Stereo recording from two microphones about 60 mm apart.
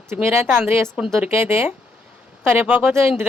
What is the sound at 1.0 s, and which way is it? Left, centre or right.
Speech, right.